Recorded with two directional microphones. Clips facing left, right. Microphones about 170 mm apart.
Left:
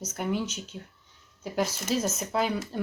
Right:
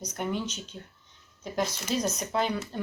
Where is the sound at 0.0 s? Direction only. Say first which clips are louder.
Left 2 dB; 5° left (ahead or behind).